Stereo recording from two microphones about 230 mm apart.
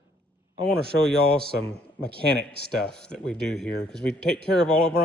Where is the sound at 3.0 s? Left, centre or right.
Centre.